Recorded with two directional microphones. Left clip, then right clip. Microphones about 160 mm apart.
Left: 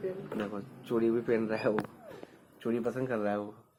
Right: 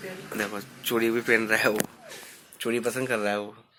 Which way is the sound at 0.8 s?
10° right (ahead or behind).